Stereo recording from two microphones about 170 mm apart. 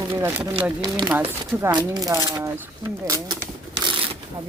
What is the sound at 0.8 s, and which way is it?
Speech, 25° right (ahead or behind).